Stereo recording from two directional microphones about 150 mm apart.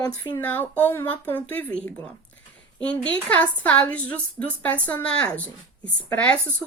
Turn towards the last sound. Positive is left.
turn(degrees=10)  # may be behind; listen again after turning